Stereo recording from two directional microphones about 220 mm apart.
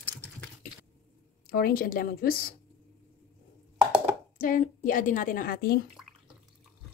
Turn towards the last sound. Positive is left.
turn(degrees=45)  # may be behind; listen again after turning